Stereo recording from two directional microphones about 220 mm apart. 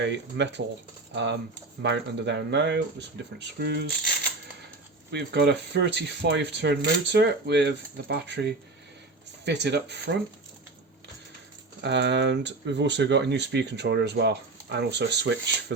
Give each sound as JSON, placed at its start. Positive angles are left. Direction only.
{"t": 0.0, "sound": "speech", "side_deg": -55}
{"t": 5.1, "sound": "speech", "side_deg": -50}
{"t": 11.8, "sound": "speech", "side_deg": -55}